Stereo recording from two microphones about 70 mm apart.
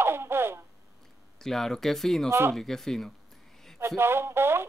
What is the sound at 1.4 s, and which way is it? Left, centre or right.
Speech, centre.